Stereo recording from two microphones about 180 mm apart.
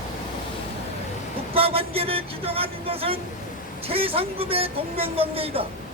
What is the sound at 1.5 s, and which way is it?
Speech, 30° right (ahead or behind).